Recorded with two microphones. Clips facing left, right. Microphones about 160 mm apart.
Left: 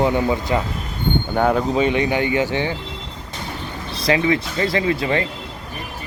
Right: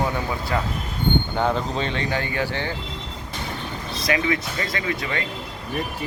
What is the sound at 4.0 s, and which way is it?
Speech, 25° left (ahead or behind).